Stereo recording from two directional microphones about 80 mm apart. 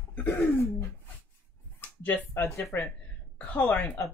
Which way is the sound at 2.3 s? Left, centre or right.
Left.